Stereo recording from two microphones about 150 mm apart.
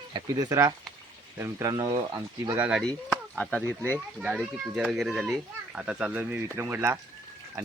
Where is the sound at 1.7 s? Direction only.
30° right (ahead or behind).